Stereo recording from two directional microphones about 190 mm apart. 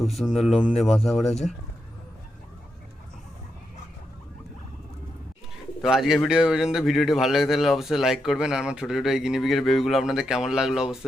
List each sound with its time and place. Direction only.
0.0 s a man's voice: centre (ahead or behind)
0.7 s speech: 35° left (ahead or behind)
5.8 s a man's voice: centre (ahead or behind)